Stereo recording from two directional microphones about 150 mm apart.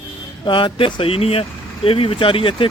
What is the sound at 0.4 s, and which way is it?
Speech, 30° left (ahead or behind).